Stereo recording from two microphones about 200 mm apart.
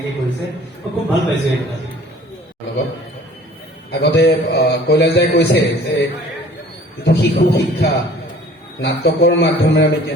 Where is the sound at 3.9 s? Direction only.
55° left (ahead or behind).